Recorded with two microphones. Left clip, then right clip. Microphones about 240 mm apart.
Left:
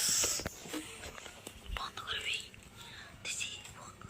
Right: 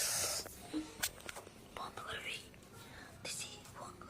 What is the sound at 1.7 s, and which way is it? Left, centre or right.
Whispering, centre.